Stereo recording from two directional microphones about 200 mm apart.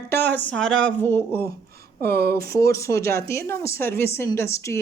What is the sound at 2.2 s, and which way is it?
Speech, 50° right (ahead or behind).